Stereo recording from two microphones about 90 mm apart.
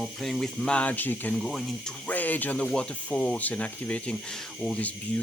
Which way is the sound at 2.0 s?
20° left (ahead or behind).